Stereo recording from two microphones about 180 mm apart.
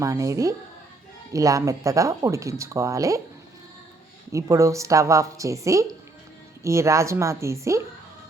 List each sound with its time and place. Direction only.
0.0 s speech: 15° right (ahead or behind)
4.3 s speech: 15° right (ahead or behind)